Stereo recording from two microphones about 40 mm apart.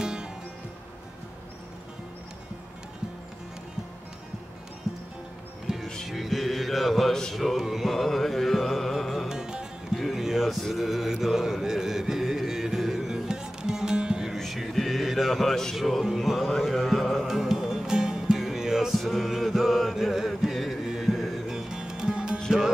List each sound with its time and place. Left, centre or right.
0.0 s music: centre
4.9 s music: centre
6.0 s music: centre
9.3 s music: centre
10.1 s a sound: centre
10.7 s mantra: centre
14.7 s music: centre
15.4 s speech: centre
15.7 s music: centre
16.4 s mantra: centre
17.3 s music: centre
18.9 s chant: centre
21.5 s music: centre